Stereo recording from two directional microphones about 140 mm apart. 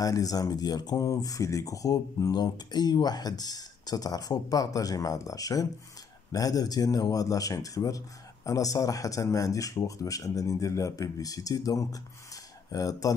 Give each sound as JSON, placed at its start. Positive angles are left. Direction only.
{"t": 0.0, "sound": "speech", "side_deg": 25}